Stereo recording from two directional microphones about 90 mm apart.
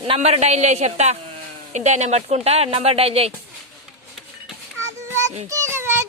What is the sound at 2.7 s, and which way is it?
Speech, 90° right.